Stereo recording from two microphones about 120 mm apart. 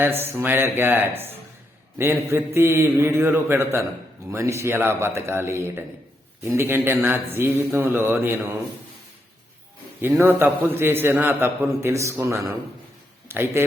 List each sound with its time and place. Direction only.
0.0 s a man's voice: 20° right (ahead or behind)
10.0 s a man's voice: 20° right (ahead or behind)